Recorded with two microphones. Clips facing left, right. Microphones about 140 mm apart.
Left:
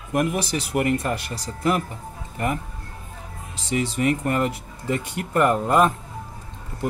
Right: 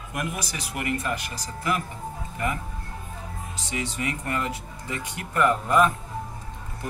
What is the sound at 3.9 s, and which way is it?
Speech, 35° left (ahead or behind).